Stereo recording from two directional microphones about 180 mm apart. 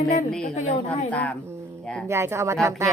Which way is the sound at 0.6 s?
40° left (ahead or behind).